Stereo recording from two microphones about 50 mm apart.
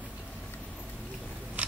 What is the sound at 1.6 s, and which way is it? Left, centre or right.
Scissors, right.